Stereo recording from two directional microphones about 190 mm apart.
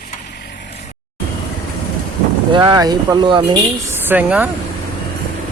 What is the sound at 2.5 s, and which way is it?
Speech, 25° right (ahead or behind).